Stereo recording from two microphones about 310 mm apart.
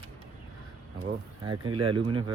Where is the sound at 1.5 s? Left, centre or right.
Centre.